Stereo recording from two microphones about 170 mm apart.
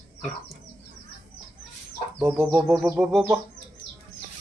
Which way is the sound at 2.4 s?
Centre (ahead or behind).